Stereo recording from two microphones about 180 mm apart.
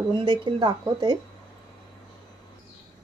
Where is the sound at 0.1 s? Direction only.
25° right (ahead or behind).